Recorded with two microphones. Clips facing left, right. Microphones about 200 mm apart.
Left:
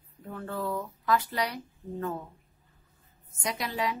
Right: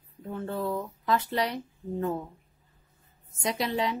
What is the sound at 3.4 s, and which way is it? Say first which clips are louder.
Speech: right 3 dB; 25° right (ahead or behind).